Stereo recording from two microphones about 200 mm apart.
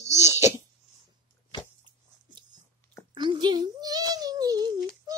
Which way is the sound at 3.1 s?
25° right (ahead or behind).